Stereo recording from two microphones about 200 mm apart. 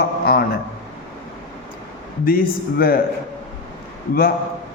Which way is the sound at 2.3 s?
45° left (ahead or behind).